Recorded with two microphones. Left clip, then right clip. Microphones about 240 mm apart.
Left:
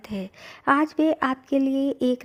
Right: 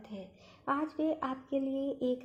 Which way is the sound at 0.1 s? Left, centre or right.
Left.